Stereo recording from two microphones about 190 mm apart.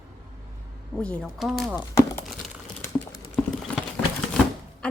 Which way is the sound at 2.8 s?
15° left (ahead or behind).